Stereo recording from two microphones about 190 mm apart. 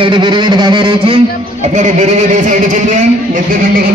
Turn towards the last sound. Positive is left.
turn(degrees=-45)  # may be behind; listen again after turning